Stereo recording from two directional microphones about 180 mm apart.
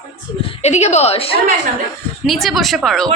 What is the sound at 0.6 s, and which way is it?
Speech, 40° left (ahead or behind).